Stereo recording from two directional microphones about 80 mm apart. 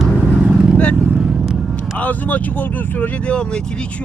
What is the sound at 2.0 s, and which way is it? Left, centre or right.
Speech, centre.